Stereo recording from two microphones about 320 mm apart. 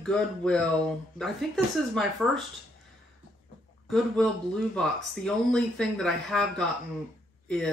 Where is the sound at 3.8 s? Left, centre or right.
Centre.